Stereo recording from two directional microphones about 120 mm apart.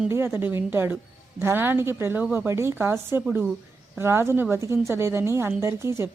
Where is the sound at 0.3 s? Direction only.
20° right (ahead or behind).